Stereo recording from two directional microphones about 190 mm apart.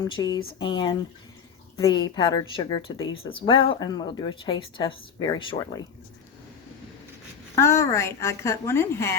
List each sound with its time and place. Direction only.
0.0 s a woman's voice: 20° left (ahead or behind)
7.5 s a woman's voice: 15° left (ahead or behind)